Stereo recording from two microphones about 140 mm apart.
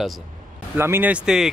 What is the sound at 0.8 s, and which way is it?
Speech, 15° right (ahead or behind).